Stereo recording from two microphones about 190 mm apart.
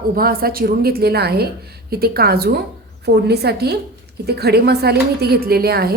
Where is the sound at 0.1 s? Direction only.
50° right (ahead or behind).